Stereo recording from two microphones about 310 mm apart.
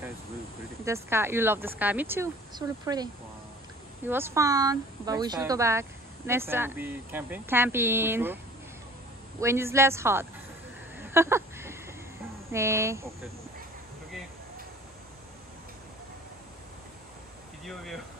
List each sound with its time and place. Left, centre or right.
0.8 s speech: centre
4.1 s speech: centre
9.4 s speech: centre
11.0 s a sound: centre
12.4 s speech: centre
17.6 s speech: centre